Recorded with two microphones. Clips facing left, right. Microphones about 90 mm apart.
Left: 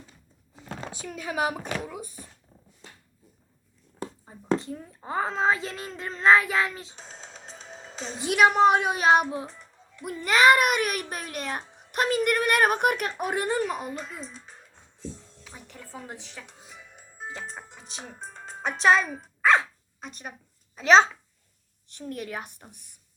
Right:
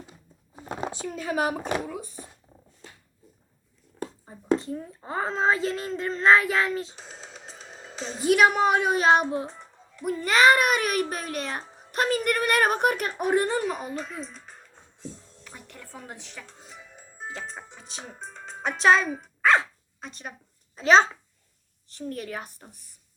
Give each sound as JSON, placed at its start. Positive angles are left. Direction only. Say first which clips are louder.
{"t": 0.6, "sound": "a sound", "louder": "right 6 dB", "side_deg": -35}
{"t": 1.1, "sound": "a woman's voice", "louder": "right 1 dB", "side_deg": 5}
{"t": 4.0, "sound": "a sound", "louder": "right 1 dB", "side_deg": 0}
{"t": 4.9, "sound": "a woman's voice", "louder": "left 1 dB", "side_deg": 5}
{"t": 10.8, "sound": "a child's voice", "louder": "right 2 dB", "side_deg": -40}
{"t": 11.9, "sound": "a woman's voice", "louder": "even", "side_deg": 5}
{"t": 15.4, "sound": "music", "louder": "even", "side_deg": 5}
{"t": 16.2, "sound": "a woman's voice", "louder": "even", "side_deg": 0}
{"t": 16.6, "sound": "music", "louder": "right 2 dB", "side_deg": 5}
{"t": 18.8, "sound": "a woman's voice", "louder": "right 1 dB", "side_deg": 5}
{"t": 19.1, "sound": "dog", "louder": "even", "side_deg": 0}
{"t": 20.7, "sound": "a woman's voice", "louder": "left 1 dB", "side_deg": 5}